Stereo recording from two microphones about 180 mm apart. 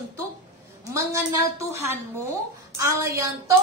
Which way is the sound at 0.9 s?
15° right (ahead or behind).